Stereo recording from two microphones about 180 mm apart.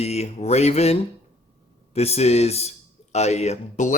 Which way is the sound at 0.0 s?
35° left (ahead or behind).